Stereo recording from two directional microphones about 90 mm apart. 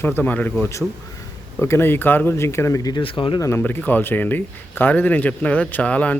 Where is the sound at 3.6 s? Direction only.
20° left (ahead or behind).